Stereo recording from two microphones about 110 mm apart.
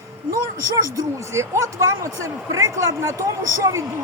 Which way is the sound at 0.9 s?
30° right (ahead or behind).